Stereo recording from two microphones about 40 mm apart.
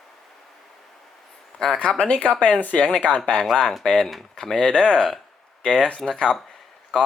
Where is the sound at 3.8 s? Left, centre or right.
Centre.